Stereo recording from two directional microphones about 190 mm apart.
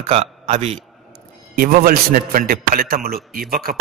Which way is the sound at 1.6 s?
50° right (ahead or behind).